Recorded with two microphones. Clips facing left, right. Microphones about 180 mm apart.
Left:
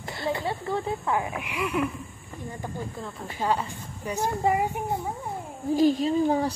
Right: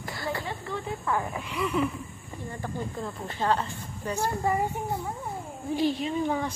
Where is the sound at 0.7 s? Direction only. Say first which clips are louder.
Left 7 dB; 35° left (ahead or behind).